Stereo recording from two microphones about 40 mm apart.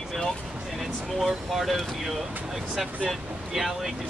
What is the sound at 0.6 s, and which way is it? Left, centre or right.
Speech, centre.